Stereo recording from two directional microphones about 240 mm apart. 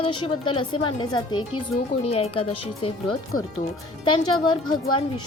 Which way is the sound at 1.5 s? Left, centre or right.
Left.